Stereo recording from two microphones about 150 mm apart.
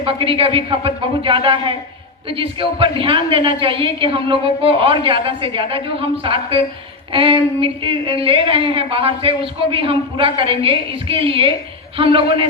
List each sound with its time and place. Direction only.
0.0 s a woman's voice: 35° right (ahead or behind)